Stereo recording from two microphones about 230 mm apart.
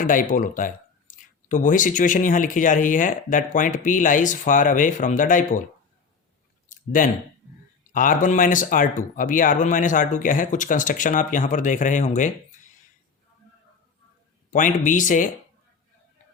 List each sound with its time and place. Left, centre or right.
0.0 s speech: left
6.7 s clicking: left
7.9 s speech: left
14.5 s speech: left